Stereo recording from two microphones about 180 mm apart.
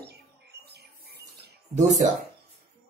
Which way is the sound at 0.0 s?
65° right (ahead or behind).